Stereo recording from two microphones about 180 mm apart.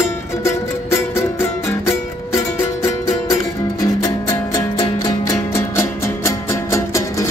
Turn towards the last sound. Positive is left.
turn(degrees=15)  # may be behind; listen again after turning